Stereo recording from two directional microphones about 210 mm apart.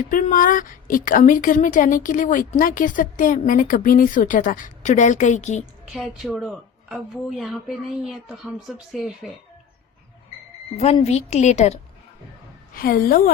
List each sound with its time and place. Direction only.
0.1 s a woman's voice: 40° left (ahead or behind)
5.9 s speech: centre (ahead or behind)
10.8 s a woman's voice: 30° left (ahead or behind)
12.7 s a woman's voice: 45° left (ahead or behind)